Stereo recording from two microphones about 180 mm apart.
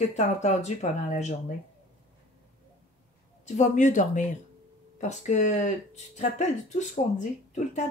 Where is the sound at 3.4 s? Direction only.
40° left (ahead or behind).